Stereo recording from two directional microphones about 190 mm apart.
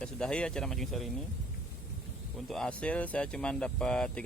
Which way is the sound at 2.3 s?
Centre (ahead or behind).